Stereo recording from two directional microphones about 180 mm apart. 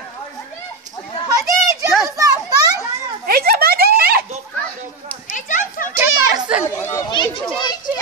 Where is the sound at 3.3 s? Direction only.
60° right (ahead or behind).